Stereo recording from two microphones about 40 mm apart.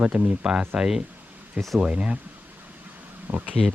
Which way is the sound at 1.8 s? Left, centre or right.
Right.